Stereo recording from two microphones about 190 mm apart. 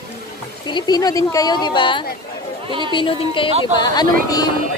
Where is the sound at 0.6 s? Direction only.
20° left (ahead or behind).